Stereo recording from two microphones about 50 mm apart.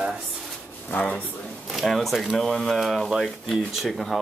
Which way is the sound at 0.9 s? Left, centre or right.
Left.